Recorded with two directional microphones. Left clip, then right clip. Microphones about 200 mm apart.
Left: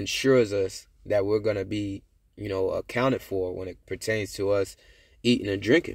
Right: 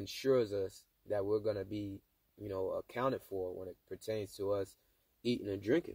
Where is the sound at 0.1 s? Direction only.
20° right (ahead or behind).